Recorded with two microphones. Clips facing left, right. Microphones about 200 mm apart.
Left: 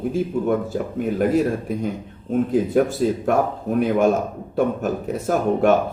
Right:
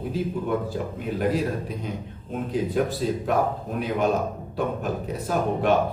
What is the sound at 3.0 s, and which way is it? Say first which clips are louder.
Speech: left 4 dB; 50° left (ahead or behind).